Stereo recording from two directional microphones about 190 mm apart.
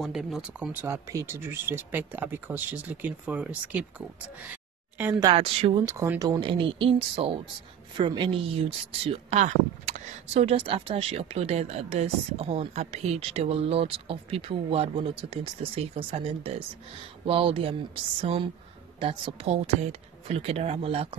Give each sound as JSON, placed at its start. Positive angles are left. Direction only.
{"t": 0.0, "sound": "speech", "side_deg": 0}
{"t": 5.2, "sound": "speech", "side_deg": -30}
{"t": 5.9, "sound": "speech", "side_deg": -15}
{"t": 6.4, "sound": "speech", "side_deg": -30}